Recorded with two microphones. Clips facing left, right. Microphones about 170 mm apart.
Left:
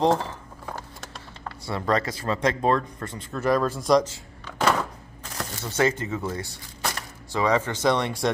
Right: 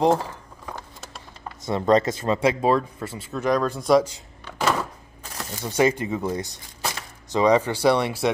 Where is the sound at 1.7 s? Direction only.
20° right (ahead or behind).